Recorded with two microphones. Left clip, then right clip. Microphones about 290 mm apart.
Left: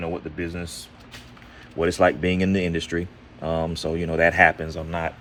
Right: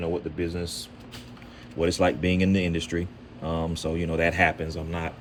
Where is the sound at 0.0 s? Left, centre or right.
Centre.